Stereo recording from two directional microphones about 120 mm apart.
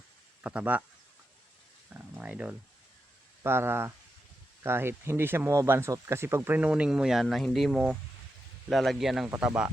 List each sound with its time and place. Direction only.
0.4 s speech: 10° right (ahead or behind)
1.9 s speech: 10° right (ahead or behind)